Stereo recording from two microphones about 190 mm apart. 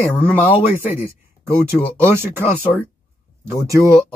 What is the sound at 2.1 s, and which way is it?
Speech, 15° right (ahead or behind).